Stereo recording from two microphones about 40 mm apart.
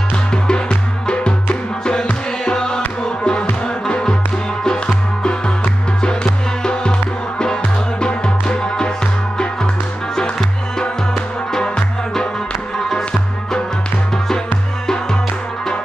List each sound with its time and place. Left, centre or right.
0.3 s music: left
10.8 s music: centre
14.1 s music: centre